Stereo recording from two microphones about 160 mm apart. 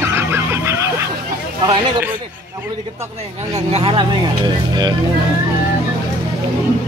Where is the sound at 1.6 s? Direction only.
30° right (ahead or behind).